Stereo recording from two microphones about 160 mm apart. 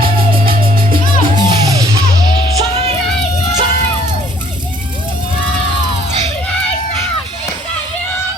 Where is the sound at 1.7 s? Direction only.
25° right (ahead or behind).